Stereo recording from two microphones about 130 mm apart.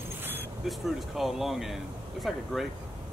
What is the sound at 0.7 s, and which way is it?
Speech, centre (ahead or behind).